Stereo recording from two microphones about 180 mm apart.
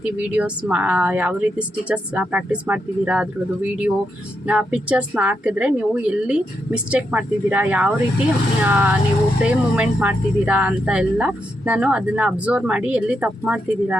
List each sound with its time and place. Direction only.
0.0 s speech: 5° right (ahead or behind)